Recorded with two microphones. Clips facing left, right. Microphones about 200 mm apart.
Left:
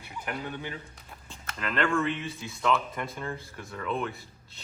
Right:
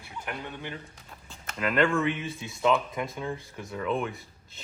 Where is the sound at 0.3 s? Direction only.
5° left (ahead or behind).